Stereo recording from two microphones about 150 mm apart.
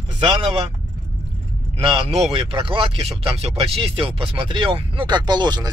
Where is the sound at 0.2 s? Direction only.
35° right (ahead or behind).